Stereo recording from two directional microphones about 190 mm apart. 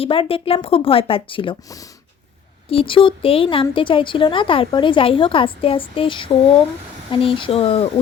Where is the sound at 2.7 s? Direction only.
30° left (ahead or behind).